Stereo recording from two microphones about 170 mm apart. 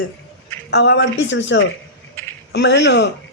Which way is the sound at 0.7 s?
85° left.